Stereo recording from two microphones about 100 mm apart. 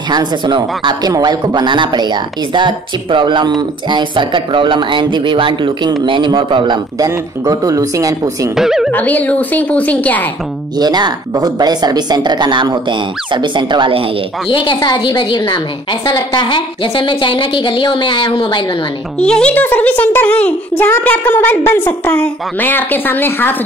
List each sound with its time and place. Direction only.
0.1 s speech: 45° right (ahead or behind)
7.0 s speech: 35° right (ahead or behind)
8.5 s speech: 5° right (ahead or behind)
8.9 s speech: 15° left (ahead or behind)
10.8 s speech: 45° right (ahead or behind)
14.5 s a woman's voice: 60° left (ahead or behind)
19.1 s a woman's voice: 10° left (ahead or behind)